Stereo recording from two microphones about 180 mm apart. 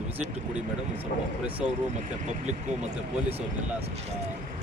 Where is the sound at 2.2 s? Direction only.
40° right (ahead or behind).